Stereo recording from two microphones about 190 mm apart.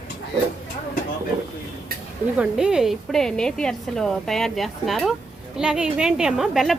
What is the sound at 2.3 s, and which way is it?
A woman's voice, 5° right (ahead or behind).